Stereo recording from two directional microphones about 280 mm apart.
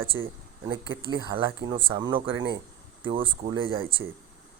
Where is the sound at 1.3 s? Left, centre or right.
Centre.